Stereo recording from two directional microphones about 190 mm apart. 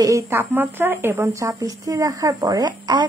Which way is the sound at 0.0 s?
15° right (ahead or behind).